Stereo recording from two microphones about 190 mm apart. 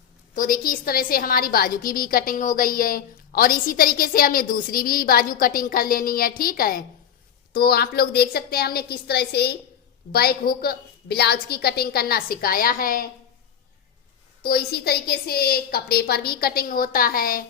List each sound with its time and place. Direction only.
0.3 s a woman's voice: 45° left (ahead or behind)
14.4 s a woman's voice: 55° left (ahead or behind)